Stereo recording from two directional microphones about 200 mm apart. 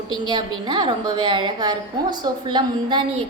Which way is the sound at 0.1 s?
20° right (ahead or behind).